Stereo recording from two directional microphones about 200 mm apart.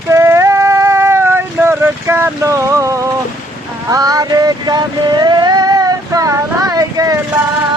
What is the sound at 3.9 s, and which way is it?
Vehicle, 20° right (ahead or behind).